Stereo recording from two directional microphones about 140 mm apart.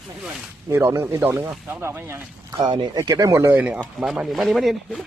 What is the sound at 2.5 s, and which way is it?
Speech, 30° right (ahead or behind).